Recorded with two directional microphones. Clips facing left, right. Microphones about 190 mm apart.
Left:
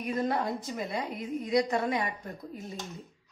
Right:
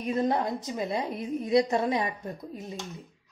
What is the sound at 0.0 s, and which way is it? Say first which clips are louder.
A woman's voice: right 3 dB; 25° right (ahead or behind).